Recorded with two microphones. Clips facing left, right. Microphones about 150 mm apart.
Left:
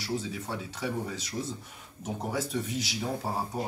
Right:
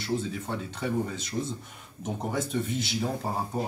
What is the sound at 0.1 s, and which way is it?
Speech, 5° left (ahead or behind).